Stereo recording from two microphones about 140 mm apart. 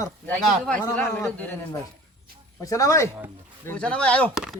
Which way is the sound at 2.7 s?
25° left (ahead or behind).